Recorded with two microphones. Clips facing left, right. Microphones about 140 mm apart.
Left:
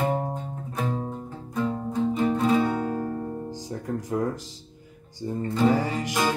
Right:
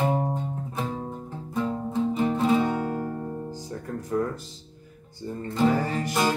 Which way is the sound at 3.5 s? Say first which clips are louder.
Left 3 dB; 15° left (ahead or behind).